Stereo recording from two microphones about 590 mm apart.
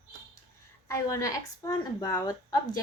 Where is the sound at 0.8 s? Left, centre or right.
Centre.